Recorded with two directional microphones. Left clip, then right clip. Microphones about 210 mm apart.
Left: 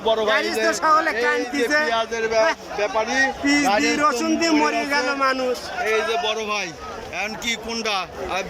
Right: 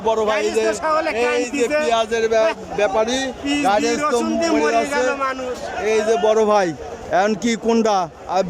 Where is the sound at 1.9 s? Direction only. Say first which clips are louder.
Right 4 dB; 15° right (ahead or behind).